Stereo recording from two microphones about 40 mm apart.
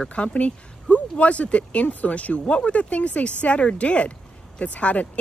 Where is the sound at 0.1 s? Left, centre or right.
Left.